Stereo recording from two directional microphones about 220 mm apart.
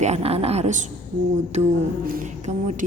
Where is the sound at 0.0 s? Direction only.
30° right (ahead or behind).